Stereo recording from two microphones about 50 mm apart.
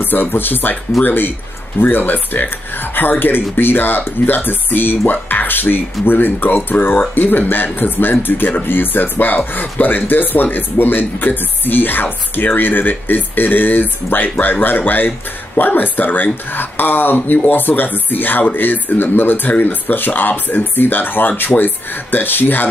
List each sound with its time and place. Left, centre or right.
0.0 s speech: left